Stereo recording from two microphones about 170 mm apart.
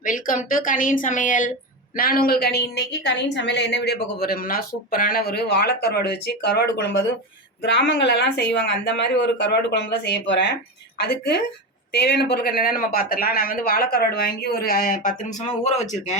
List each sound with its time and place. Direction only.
0.0 s a woman's voice: 50° left (ahead or behind); by 10.5 s 90° left
10.9 s a woman's voice: 75° left (ahead or behind); by 16.1 s 45° left (ahead or behind)